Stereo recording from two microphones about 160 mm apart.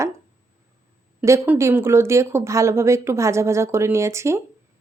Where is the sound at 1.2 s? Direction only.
15° right (ahead or behind).